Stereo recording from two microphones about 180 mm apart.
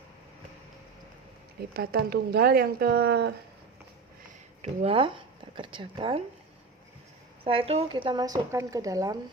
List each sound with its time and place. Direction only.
1.7 s speech: 60° right (ahead or behind)
4.6 s speech: 35° right (ahead or behind)
7.4 s speech: 30° right (ahead or behind)